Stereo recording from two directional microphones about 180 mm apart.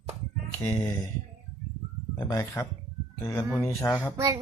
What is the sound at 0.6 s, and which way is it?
Speech, 10° left (ahead or behind).